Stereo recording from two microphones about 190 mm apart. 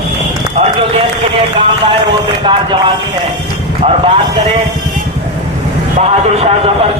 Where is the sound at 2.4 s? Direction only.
25° right (ahead or behind).